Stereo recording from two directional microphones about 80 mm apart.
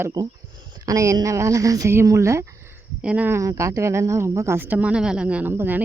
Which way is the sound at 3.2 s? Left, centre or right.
Right.